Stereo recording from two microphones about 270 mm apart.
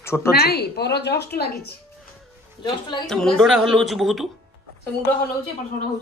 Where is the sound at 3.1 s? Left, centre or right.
Centre.